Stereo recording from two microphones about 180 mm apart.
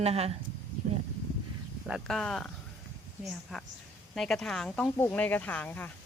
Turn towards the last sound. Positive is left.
turn(degrees=10)  # may be behind; listen again after turning